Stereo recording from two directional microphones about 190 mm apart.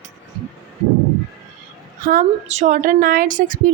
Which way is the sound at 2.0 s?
45° right (ahead or behind).